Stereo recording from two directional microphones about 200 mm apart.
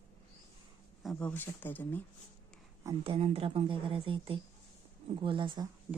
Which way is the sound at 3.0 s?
30° right (ahead or behind).